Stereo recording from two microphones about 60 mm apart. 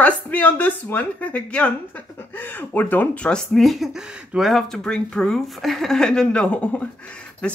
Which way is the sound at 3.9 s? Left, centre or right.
Centre.